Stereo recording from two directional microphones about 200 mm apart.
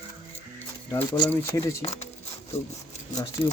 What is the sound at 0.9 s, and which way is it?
Speech, 20° left (ahead or behind).